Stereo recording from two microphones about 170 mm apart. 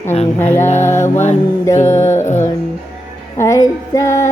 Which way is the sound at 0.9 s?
45° left (ahead or behind).